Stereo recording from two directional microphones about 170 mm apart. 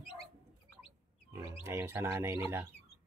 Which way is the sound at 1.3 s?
15° right (ahead or behind).